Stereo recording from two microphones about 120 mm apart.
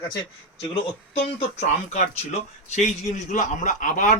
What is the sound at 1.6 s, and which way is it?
A man's voice, 70° left (ahead or behind).